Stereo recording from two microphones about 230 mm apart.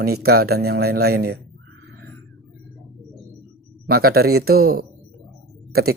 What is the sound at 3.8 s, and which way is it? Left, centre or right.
Speech, right.